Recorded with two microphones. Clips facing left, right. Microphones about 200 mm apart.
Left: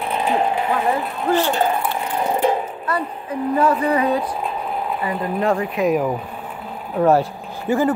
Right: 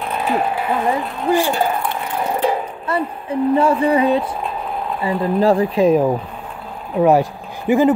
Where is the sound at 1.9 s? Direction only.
15° left (ahead or behind).